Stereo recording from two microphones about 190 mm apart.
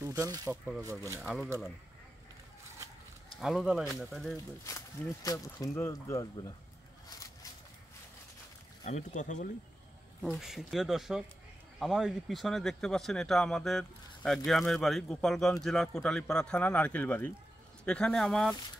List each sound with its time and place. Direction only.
0.0 s speech: 15° right (ahead or behind)
1.0 s speech: 15° left (ahead or behind)
3.3 s speech: centre (ahead or behind)
4.6 s speech: 20° left (ahead or behind)
8.8 s speech: 40° left (ahead or behind)
10.2 s speech: centre (ahead or behind)